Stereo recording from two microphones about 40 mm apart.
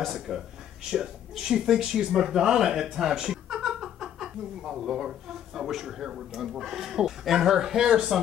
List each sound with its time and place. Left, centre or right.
0.0 s speech: centre